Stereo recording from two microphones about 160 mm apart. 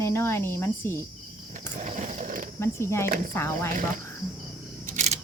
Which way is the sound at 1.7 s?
50° right (ahead or behind).